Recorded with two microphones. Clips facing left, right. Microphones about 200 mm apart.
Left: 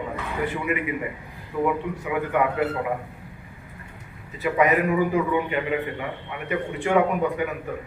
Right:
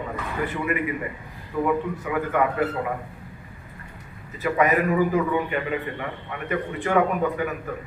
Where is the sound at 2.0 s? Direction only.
15° left (ahead or behind).